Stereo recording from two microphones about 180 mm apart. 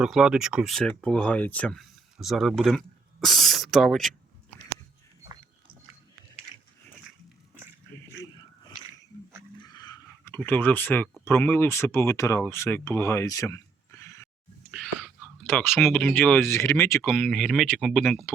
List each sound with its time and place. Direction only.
0.0 s speech: 5° right (ahead or behind)
9.6 s a sound: 25° left (ahead or behind)
11.3 s speech: 15° left (ahead or behind)
14.0 s a sound: 15° left (ahead or behind)
14.7 s whispering: centre (ahead or behind)
15.4 s speech: 10° left (ahead or behind)